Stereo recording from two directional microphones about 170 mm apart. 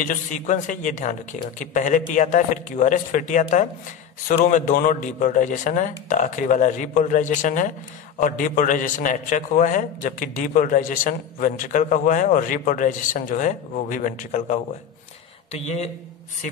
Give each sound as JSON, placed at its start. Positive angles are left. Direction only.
{"t": 0.0, "sound": "a man's voice", "side_deg": 50}